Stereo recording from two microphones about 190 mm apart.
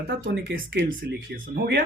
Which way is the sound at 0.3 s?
55° right (ahead or behind).